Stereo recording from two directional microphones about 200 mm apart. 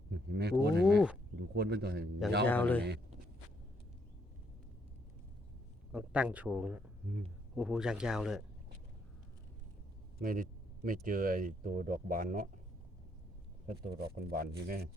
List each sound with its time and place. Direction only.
0.1 s a sound: 55° right (ahead or behind)
0.9 s a sound: 5° right (ahead or behind)
1.4 s speech: 55° right (ahead or behind)
2.5 s speech: 10° left (ahead or behind)
5.9 s speech: 5° right (ahead or behind)
10.2 s speech: 45° right (ahead or behind)
13.7 s speech: 50° right (ahead or behind)